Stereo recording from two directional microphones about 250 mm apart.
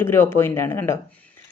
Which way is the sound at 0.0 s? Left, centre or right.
Centre.